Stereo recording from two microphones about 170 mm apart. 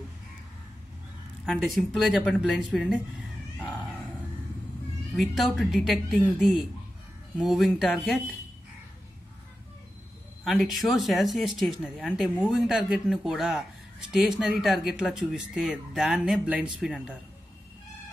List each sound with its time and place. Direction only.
1.4 s speech: 5° left (ahead or behind)
5.1 s speech: centre (ahead or behind)
7.3 s speech: centre (ahead or behind)
10.4 s speech: centre (ahead or behind)